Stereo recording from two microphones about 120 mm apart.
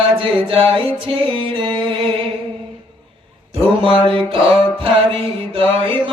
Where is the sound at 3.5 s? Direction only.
50° right (ahead or behind).